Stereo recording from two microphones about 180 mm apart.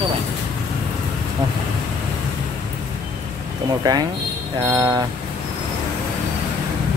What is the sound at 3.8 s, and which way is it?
Speech, 20° right (ahead or behind).